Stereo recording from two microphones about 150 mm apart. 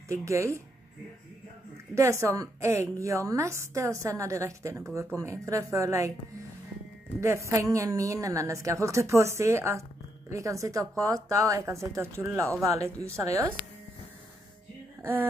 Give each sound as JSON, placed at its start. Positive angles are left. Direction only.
{"t": 0.1, "sound": "a woman's voice", "side_deg": -20}
{"t": 2.0, "sound": "a woman's voice", "side_deg": -20}
{"t": 7.2, "sound": "a woman's voice", "side_deg": -20}
{"t": 15.0, "sound": "a sound", "side_deg": -15}